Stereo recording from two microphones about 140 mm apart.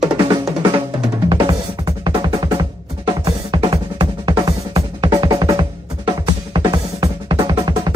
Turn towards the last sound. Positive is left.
turn(degrees=-30)  # may be behind; listen again after turning